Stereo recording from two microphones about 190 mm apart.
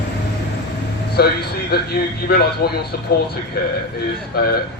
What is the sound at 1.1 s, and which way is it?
A man's voice, 55° left (ahead or behind).